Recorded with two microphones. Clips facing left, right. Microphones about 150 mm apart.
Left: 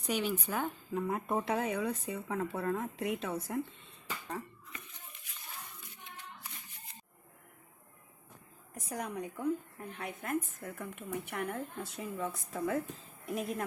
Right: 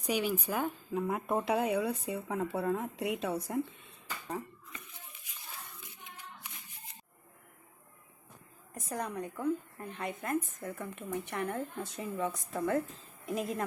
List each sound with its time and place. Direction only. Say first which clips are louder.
0.1 s speech: right 2 dB; 10° right (ahead or behind)
8.9 s speech: right 2 dB; 10° left (ahead or behind)